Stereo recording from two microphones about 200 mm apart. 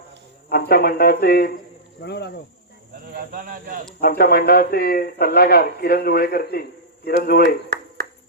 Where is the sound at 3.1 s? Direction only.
45° right (ahead or behind).